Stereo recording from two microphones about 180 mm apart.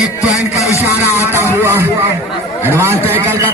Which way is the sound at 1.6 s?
15° right (ahead or behind).